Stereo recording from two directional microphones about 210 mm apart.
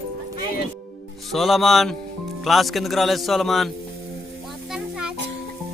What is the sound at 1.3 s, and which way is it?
A man's voice, centre (ahead or behind).